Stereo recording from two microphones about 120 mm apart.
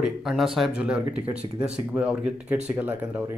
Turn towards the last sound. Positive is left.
turn(degrees=-15)  # may be behind; listen again after turning